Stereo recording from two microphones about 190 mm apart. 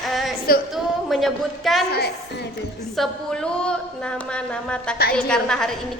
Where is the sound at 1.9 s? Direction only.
55° left (ahead or behind).